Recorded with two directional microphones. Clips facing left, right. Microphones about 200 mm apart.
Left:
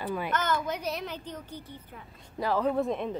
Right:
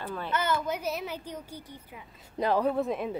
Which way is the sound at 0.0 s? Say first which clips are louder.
Left 4 dB; 10° left (ahead or behind).